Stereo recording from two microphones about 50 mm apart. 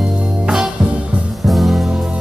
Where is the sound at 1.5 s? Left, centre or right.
Centre.